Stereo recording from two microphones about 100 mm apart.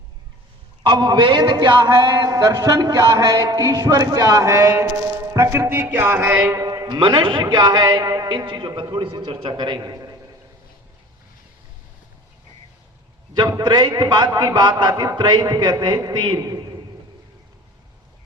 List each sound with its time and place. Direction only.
0.9 s a man's voice: 50° right (ahead or behind); by 6.4 s 20° right (ahead or behind)
6.4 s a sound: 35° right (ahead or behind)
7.0 s a man's voice: 55° right (ahead or behind); by 10.2 s 35° right (ahead or behind)
13.6 s a man's voice: 45° right (ahead or behind)
16.4 s speech: 35° right (ahead or behind)